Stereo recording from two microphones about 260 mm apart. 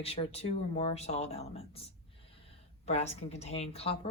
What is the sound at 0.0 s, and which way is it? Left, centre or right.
Speech, left.